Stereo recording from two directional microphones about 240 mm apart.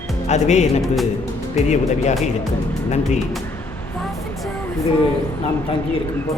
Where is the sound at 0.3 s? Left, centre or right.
Left.